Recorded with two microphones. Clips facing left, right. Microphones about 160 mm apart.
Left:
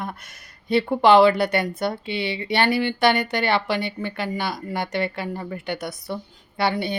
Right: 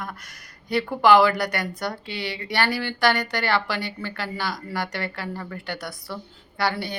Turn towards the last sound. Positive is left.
turn(degrees=20)  # may be behind; listen again after turning